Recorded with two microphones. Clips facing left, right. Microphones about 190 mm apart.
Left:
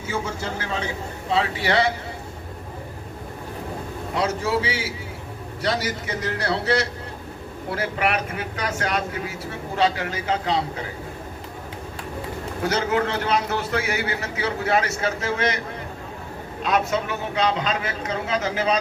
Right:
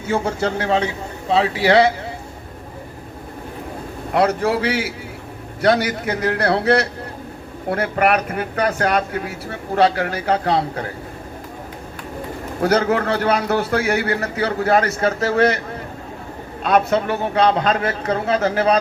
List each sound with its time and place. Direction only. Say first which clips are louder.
0.1 s a man's voice: right 8 dB; 65° right (ahead or behind)
4.1 s speech: right 6 dB; 60° right (ahead or behind)
12.6 s speech: right 5 dB; 60° right (ahead or behind)
16.6 s speech: right 6 dB; 55° right (ahead or behind)